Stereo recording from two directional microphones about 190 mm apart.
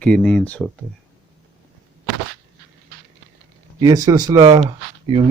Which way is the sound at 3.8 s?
20° right (ahead or behind).